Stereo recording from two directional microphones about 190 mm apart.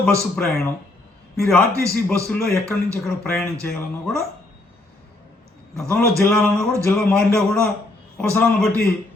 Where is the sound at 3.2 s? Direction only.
15° left (ahead or behind).